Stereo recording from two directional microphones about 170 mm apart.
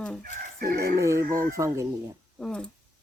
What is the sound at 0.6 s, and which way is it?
Fowl, 60° right (ahead or behind).